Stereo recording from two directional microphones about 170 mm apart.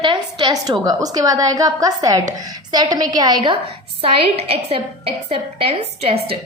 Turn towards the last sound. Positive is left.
turn(degrees=-35)  # may be behind; listen again after turning